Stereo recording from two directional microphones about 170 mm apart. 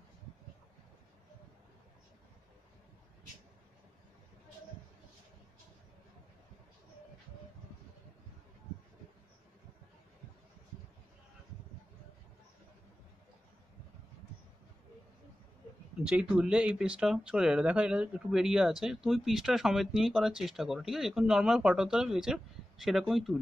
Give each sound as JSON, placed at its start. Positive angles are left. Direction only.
{"t": 16.0, "sound": "speech", "side_deg": -5}